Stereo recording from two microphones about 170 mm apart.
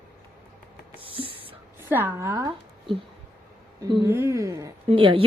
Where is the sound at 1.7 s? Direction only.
10° right (ahead or behind).